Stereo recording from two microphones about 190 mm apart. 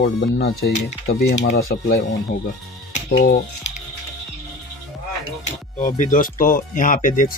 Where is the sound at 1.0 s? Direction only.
65° left (ahead or behind).